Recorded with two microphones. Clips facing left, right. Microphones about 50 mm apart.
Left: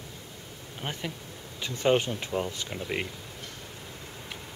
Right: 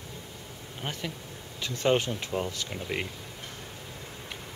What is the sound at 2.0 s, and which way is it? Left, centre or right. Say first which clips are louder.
Speech: left 1 dB; centre.